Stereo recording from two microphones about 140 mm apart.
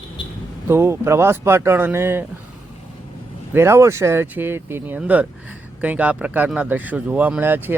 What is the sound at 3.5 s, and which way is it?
Speech, 20° right (ahead or behind).